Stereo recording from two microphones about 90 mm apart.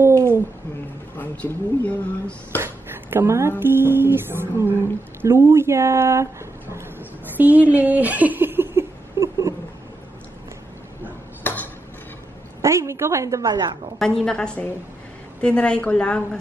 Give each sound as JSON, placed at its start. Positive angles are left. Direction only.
{"t": 0.0, "sound": "babbling", "side_deg": -30}
{"t": 1.1, "sound": "speech", "side_deg": 20}
{"t": 2.6, "sound": "speech", "side_deg": -25}
{"t": 7.3, "sound": "giggle", "side_deg": -15}
{"t": 12.6, "sound": "speech", "side_deg": -30}
{"t": 13.5, "sound": "a woman's voice", "side_deg": -50}
{"t": 13.9, "sound": "speech", "side_deg": 5}